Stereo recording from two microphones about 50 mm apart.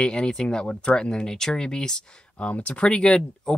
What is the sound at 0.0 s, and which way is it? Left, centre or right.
Speech, centre.